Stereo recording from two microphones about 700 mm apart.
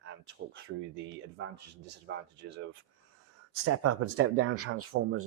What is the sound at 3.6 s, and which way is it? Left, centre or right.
Speech, centre.